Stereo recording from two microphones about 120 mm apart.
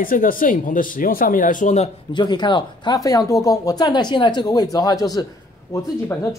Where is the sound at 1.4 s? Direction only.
90° left.